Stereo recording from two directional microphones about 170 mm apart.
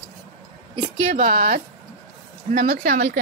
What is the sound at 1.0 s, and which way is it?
Speech, 50° right (ahead or behind).